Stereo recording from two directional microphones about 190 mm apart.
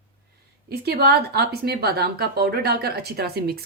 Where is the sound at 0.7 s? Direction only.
55° right (ahead or behind).